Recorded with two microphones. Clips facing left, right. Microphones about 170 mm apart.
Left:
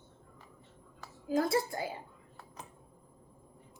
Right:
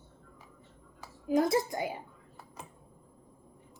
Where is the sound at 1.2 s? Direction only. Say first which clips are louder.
Right 3 dB; 20° right (ahead or behind).